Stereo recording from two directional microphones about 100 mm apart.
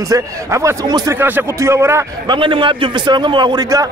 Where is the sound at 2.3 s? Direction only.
55° right (ahead or behind).